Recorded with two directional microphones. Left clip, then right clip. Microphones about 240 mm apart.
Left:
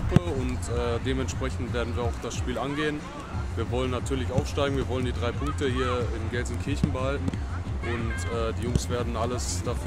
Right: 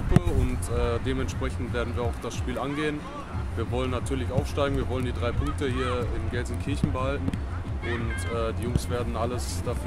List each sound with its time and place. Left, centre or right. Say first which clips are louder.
0.1 s speech: even; right
0.7 s speech: even; centre